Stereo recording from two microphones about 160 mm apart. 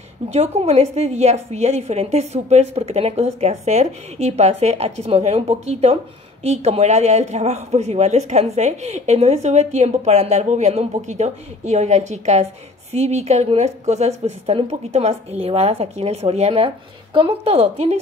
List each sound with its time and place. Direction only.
0.3 s a woman's voice: 40° right (ahead or behind)